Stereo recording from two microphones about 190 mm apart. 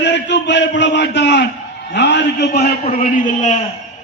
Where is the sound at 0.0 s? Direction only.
65° left (ahead or behind).